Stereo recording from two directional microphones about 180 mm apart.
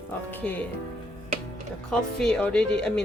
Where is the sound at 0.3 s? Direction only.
10° left (ahead or behind).